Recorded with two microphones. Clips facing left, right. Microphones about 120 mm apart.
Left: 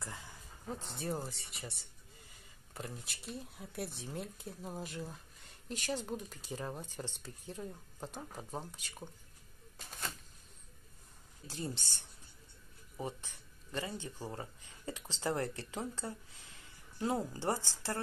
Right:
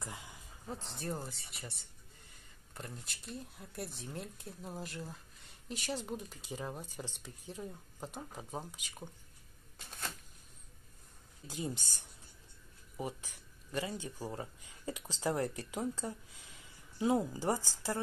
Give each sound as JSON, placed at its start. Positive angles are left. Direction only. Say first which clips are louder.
{"t": 0.0, "sound": "a sound", "louder": "right 1 dB", "side_deg": -15}
{"t": 0.7, "sound": "speech", "louder": "left 1 dB", "side_deg": 0}
{"t": 11.4, "sound": "speech", "louder": "right 2 dB", "side_deg": -15}
{"t": 12.9, "sound": "speech", "louder": "right 1 dB", "side_deg": -10}